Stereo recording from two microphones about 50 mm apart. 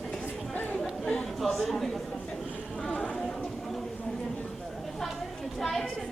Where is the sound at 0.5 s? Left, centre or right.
Left.